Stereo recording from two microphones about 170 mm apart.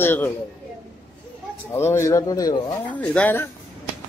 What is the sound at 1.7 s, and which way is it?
Speech, 15° left (ahead or behind).